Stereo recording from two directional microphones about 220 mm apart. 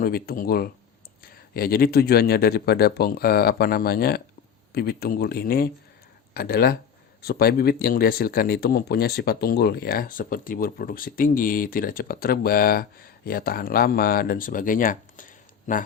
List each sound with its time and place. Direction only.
0.0 s speech: 40° left (ahead or behind)